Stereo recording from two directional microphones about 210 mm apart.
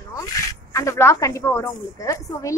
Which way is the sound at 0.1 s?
15° left (ahead or behind).